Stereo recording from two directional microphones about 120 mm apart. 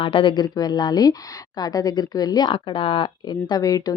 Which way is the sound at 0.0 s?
45° left (ahead or behind).